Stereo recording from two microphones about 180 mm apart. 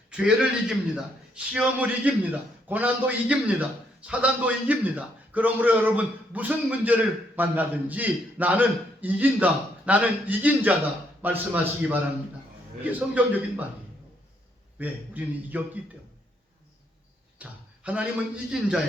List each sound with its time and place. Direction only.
0.1 s a man's voice: 5° right (ahead or behind)
14.8 s a man's voice: 10° right (ahead or behind)
17.3 s a sound: 5° right (ahead or behind)
18.5 s a man's voice: centre (ahead or behind)